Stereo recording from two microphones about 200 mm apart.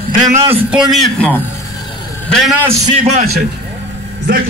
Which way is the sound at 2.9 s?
30° right (ahead or behind).